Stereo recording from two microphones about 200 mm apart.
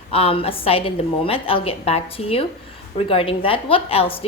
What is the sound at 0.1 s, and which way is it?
A woman's voice, 30° left (ahead or behind).